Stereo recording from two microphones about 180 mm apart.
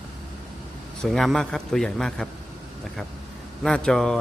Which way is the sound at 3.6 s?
5° left (ahead or behind).